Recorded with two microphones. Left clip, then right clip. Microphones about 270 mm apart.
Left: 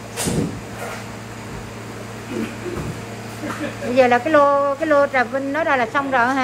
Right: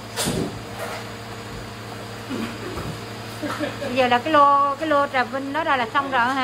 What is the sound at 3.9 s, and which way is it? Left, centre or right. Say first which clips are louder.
A woman's voice: left 4 dB; centre.